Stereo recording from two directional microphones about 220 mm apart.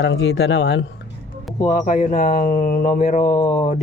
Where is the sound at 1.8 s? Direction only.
40° left (ahead or behind).